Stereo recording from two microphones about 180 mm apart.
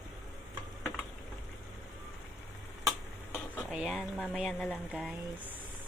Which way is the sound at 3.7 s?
Centre (ahead or behind).